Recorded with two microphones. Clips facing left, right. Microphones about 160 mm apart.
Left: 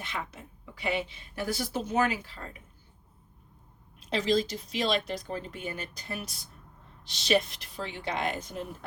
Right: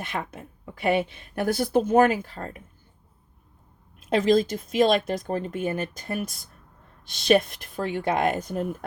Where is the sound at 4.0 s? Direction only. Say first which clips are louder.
Right 7 dB; 50° right (ahead or behind).